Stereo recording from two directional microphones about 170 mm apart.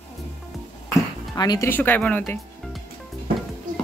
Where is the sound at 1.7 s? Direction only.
10° left (ahead or behind).